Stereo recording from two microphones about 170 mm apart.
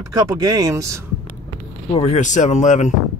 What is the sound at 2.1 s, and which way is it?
Speech, 45° left (ahead or behind).